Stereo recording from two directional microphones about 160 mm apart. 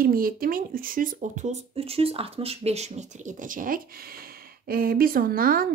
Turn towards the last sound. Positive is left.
turn(degrees=-65)  # may be behind; listen again after turning